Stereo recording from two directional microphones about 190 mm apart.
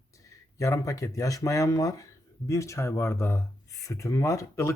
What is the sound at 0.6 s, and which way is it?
Speech, 15° left (ahead or behind).